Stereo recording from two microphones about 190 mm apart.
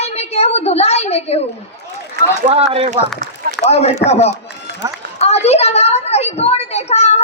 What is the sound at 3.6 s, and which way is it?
A woman's voice, 35° left (ahead or behind).